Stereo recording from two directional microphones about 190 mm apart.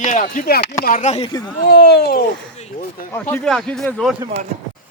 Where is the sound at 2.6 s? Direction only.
35° left (ahead or behind).